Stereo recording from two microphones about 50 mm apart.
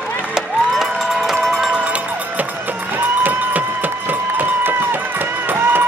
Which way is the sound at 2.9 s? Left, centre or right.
Right.